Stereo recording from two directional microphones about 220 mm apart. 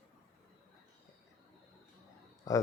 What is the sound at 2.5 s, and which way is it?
Speech, 15° left (ahead or behind).